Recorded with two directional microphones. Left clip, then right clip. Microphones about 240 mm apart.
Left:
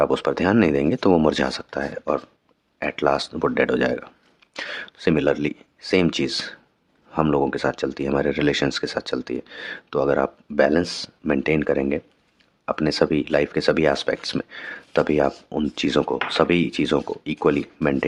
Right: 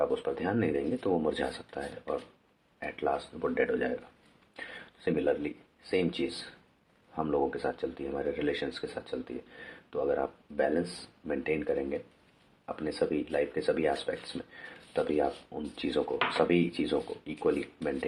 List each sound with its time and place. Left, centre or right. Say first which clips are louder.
0.0 s speech: left 10 dB; left